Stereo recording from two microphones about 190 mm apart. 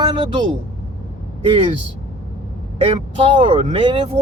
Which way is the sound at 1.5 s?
30° right (ahead or behind).